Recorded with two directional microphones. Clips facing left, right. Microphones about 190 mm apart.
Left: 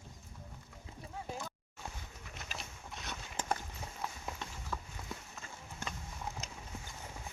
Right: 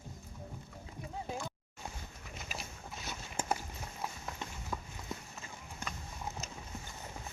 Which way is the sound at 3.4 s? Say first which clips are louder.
Even; 10° right (ahead or behind).